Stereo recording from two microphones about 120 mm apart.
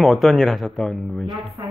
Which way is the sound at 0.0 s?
Centre (ahead or behind).